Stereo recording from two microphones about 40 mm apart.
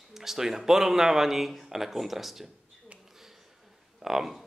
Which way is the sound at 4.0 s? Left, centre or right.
Centre.